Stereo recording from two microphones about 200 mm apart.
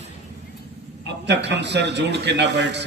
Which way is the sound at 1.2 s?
60° right (ahead or behind).